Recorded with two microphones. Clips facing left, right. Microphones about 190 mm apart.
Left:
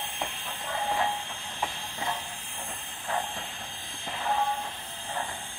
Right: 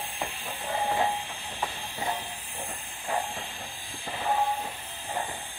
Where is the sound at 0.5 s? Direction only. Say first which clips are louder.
Right 3 dB; 15° right (ahead or behind).